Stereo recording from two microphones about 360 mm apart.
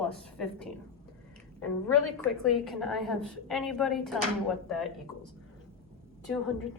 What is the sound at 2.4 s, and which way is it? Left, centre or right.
A woman's voice, centre.